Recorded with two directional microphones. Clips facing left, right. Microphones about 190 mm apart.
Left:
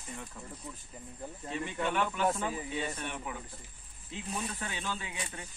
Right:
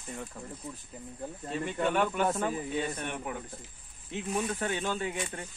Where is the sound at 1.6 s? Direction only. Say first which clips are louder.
Right 4 dB; 45° right (ahead or behind).